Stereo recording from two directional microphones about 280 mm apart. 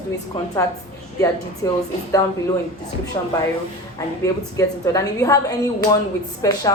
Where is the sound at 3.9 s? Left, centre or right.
Centre.